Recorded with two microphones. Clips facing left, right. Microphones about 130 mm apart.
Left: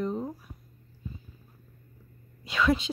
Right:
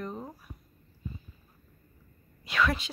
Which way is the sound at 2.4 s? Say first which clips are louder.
Left 3 dB; 25° left (ahead or behind).